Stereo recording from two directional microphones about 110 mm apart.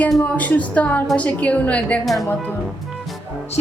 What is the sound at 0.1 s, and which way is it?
A woman's voice, 10° left (ahead or behind).